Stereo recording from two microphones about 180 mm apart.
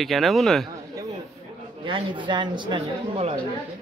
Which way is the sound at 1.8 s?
25° right (ahead or behind).